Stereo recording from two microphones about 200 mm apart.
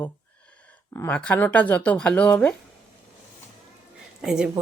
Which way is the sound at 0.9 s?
10° left (ahead or behind).